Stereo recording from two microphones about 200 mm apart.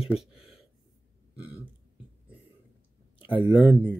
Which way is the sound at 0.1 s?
5° right (ahead or behind).